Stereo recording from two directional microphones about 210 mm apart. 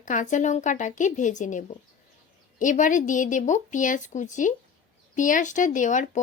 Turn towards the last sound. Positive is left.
turn(degrees=35)  # may be behind; listen again after turning